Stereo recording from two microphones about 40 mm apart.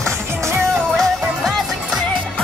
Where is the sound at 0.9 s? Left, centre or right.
Centre.